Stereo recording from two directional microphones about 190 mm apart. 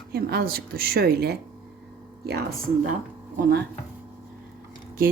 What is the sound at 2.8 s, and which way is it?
Speech, 45° right (ahead or behind).